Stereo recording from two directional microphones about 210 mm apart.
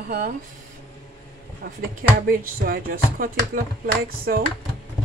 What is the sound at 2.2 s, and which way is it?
Speech, 45° right (ahead or behind).